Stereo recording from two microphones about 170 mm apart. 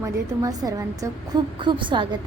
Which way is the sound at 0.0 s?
20° right (ahead or behind).